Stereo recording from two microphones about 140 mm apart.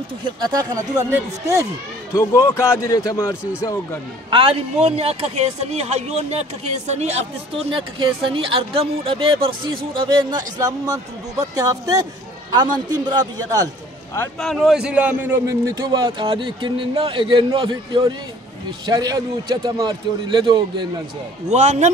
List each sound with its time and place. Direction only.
0.5 s speech: 25° right (ahead or behind)
2.1 s a man's voice: 20° left (ahead or behind)
4.3 s a man's voice: 40° right (ahead or behind)
14.4 s a man's voice: centre (ahead or behind); by 20.9 s 35° right (ahead or behind)
21.5 s speech: 55° right (ahead or behind)